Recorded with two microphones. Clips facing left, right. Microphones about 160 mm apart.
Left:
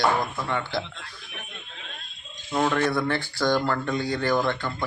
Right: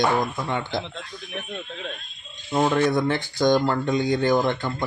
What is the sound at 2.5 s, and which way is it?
Speech, 20° right (ahead or behind).